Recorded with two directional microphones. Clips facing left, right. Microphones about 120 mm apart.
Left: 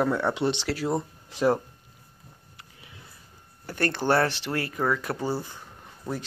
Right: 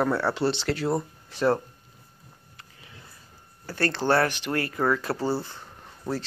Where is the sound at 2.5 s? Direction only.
20° left (ahead or behind).